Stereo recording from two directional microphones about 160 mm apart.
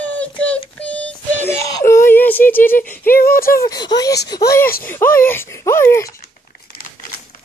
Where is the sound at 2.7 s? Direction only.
10° left (ahead or behind).